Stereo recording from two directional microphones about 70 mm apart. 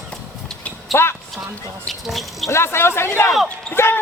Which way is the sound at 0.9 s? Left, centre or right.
Left.